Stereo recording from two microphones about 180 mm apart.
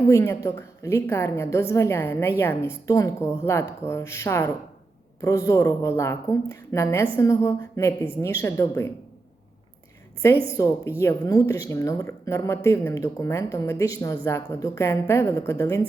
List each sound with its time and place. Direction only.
0.1 s speech: 15° left (ahead or behind)
10.6 s a woman's voice: 20° left (ahead or behind)